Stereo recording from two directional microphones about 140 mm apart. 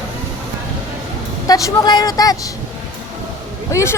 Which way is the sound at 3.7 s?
20° left (ahead or behind).